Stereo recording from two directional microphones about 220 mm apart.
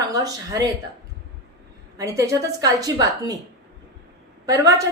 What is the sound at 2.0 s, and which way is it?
A woman's voice, 15° right (ahead or behind).